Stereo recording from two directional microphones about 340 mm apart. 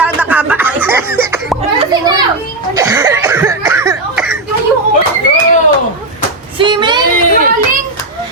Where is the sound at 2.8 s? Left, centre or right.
Centre.